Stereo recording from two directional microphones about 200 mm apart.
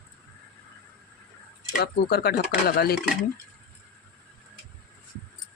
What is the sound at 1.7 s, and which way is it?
Speech, 50° left (ahead or behind).